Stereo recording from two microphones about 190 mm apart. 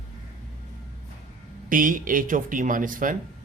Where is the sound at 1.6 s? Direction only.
45° right (ahead or behind).